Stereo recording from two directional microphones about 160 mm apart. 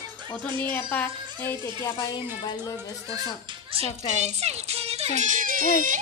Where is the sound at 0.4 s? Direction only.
10° left (ahead or behind).